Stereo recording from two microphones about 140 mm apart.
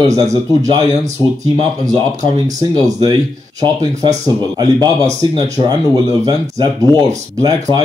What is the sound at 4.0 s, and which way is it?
Speech, 30° right (ahead or behind).